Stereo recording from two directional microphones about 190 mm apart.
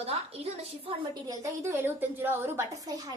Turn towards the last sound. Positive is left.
turn(degrees=-20)  # may be behind; listen again after turning